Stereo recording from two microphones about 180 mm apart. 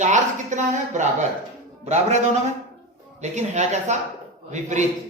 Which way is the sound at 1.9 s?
40° right (ahead or behind).